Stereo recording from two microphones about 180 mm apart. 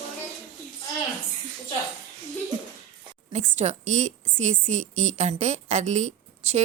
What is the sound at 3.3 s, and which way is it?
A woman's voice, 40° right (ahead or behind).